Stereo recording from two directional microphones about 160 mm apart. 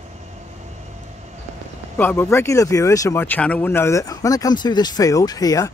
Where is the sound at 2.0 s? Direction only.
15° left (ahead or behind).